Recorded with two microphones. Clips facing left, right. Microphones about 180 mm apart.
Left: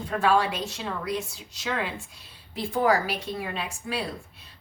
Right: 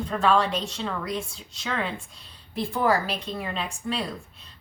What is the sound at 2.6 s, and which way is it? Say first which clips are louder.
A woman's voice: even; 10° left (ahead or behind).